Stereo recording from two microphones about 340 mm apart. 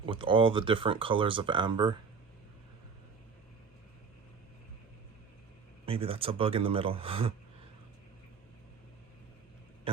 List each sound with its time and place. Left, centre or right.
0.0 s speech: centre
5.8 s speech: centre